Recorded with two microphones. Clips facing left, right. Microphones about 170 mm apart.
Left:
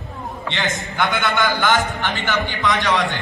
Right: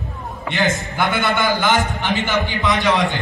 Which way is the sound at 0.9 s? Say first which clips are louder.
Even; centre (ahead or behind).